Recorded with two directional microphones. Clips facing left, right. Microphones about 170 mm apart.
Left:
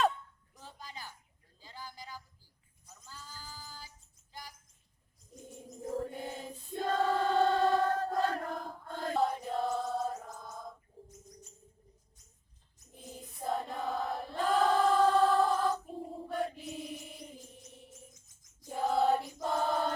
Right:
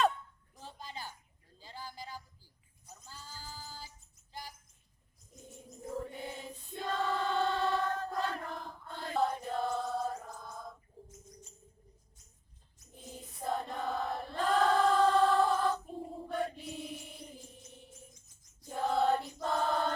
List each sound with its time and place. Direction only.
0.6 s a sound: 30° right (ahead or behind)
3.1 s music: 30° right (ahead or behind)
6.0 s choir: 45° left (ahead or behind)
9.1 s chant: centre (ahead or behind)
13.1 s choir: centre (ahead or behind)
18.7 s choir: 5° left (ahead or behind)